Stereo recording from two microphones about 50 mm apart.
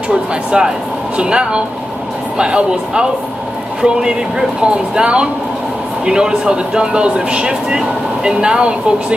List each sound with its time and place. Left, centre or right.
0.1 s speech: centre